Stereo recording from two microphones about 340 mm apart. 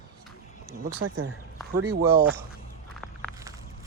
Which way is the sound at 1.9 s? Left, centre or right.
Right.